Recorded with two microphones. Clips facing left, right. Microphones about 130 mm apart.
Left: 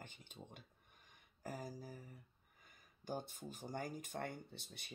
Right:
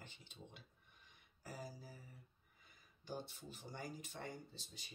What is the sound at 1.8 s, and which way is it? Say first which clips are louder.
Speech: left 5 dB; 45° left (ahead or behind).